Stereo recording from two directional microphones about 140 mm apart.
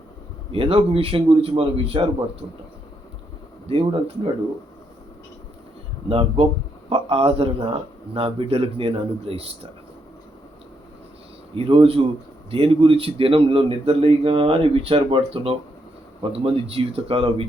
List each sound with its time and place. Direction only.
0.5 s a man's voice: 40° right (ahead or behind)
3.7 s a man's voice: 40° right (ahead or behind)
6.1 s a man's voice: 40° right (ahead or behind)
11.5 s a man's voice: 40° right (ahead or behind)